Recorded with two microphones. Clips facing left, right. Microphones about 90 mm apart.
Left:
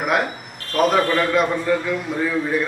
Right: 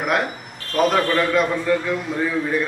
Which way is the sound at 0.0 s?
5° left (ahead or behind).